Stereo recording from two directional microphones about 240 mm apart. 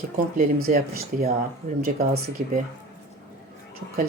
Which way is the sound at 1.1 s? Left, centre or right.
Right.